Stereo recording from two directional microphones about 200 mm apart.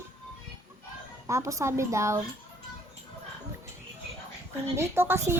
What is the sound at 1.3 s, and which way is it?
Speech, 15° right (ahead or behind).